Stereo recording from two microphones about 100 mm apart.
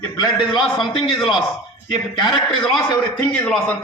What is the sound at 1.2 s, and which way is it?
Speech, centre (ahead or behind).